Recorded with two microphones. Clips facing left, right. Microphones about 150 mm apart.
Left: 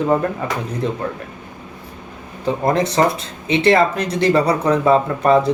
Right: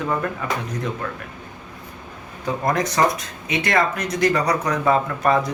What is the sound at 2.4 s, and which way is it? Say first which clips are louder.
Speech: left 4 dB; 25° left (ahead or behind).